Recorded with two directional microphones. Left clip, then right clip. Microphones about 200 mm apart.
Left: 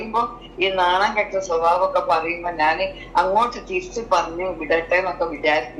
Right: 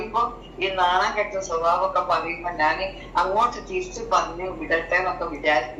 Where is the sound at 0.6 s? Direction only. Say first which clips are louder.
Left 3 dB; 25° left (ahead or behind).